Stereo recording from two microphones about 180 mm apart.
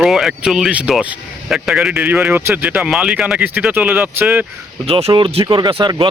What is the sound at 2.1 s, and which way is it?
Speech, 15° right (ahead or behind).